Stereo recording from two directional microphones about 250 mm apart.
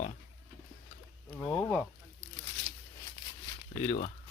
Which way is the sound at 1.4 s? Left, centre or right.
Centre.